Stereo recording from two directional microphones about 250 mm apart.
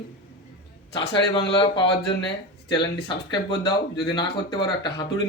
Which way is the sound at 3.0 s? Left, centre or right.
Centre.